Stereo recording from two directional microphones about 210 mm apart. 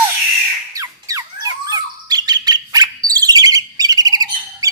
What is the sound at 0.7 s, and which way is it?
Bird, 15° right (ahead or behind).